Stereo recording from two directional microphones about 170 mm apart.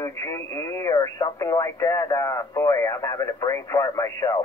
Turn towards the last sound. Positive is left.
turn(degrees=20)  # may be behind; listen again after turning